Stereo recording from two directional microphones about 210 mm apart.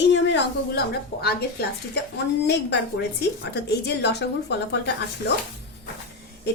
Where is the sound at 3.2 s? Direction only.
50° left (ahead or behind).